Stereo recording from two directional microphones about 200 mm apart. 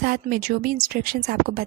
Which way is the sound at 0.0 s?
45° right (ahead or behind).